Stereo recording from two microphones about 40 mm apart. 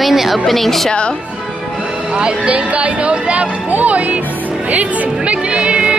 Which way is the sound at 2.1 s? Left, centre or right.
Right.